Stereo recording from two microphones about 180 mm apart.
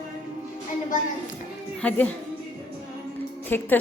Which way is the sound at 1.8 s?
10° left (ahead or behind).